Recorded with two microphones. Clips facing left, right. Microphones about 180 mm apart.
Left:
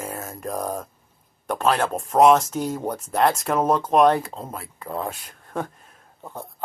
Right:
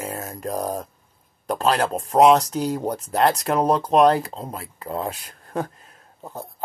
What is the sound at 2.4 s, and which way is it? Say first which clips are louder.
Speech: right 2 dB; centre (ahead or behind).